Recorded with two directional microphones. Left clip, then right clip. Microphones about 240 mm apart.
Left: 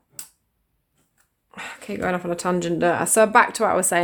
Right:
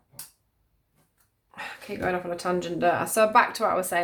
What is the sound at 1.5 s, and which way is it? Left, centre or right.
Speech, left.